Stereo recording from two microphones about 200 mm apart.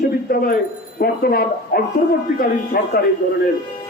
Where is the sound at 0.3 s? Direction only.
50° left (ahead or behind).